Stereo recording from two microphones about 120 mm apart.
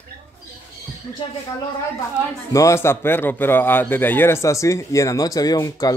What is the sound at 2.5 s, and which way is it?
Speech, 25° left (ahead or behind).